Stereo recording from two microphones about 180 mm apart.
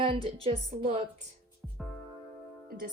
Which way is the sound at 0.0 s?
30° right (ahead or behind).